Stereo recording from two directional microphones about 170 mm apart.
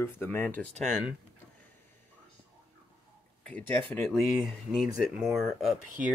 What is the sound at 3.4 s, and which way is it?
Speech, 10° left (ahead or behind).